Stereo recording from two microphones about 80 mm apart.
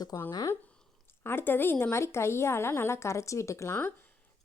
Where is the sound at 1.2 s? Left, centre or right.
Left.